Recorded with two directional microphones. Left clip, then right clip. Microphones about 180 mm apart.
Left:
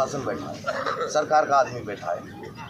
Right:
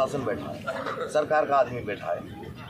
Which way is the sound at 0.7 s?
70° right (ahead or behind).